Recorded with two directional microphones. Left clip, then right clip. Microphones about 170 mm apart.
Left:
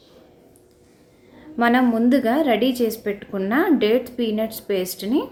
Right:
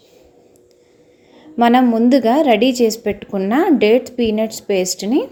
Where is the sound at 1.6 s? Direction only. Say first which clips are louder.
Right 5 dB; 35° right (ahead or behind).